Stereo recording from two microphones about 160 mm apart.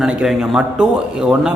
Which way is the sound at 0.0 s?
5° right (ahead or behind).